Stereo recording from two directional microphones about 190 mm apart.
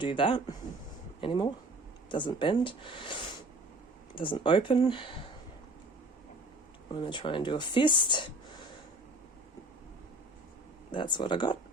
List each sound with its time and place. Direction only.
0.0 s speech: 25° left (ahead or behind)
6.9 s speech: 25° left (ahead or behind)
10.9 s speech: 25° left (ahead or behind)